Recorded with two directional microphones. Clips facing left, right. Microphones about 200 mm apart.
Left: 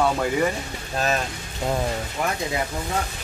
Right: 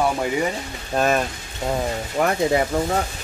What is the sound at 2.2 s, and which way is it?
Speech, 50° right (ahead or behind).